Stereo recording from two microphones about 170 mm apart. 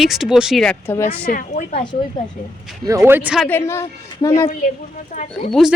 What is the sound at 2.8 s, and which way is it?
Speech, 15° right (ahead or behind).